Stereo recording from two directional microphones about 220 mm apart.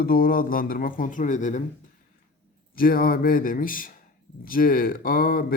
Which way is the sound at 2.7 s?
40° left (ahead or behind).